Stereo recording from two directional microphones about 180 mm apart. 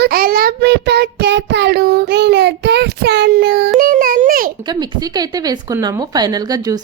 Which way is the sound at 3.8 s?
50° right (ahead or behind).